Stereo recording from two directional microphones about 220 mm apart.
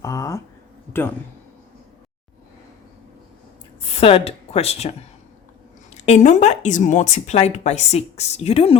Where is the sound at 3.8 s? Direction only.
25° left (ahead or behind).